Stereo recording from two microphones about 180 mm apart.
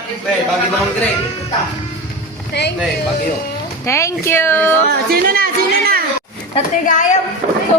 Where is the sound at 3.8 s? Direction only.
15° left (ahead or behind).